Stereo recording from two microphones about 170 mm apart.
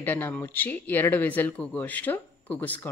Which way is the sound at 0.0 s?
10° left (ahead or behind).